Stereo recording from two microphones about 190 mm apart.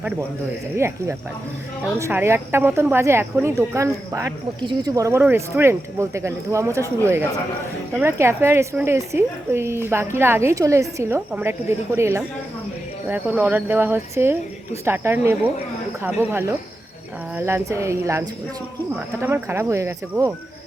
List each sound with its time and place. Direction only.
0.8 s speech: 15° right (ahead or behind)